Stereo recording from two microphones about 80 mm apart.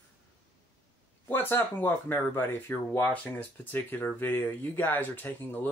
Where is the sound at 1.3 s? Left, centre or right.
Left.